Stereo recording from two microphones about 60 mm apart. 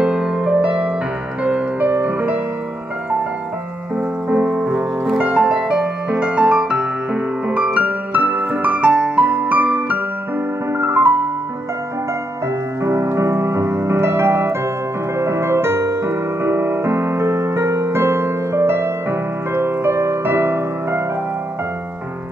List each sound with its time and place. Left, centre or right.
0.0 s music: centre; by 2.4 s right
3.9 s music: right
10.7 s music: right
12.8 s music: right